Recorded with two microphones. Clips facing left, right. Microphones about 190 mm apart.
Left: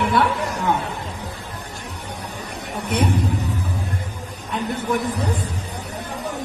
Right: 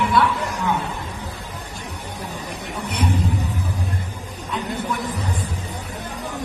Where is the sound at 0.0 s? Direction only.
55° left (ahead or behind).